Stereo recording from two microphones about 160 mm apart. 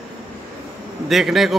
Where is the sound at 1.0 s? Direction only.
Centre (ahead or behind).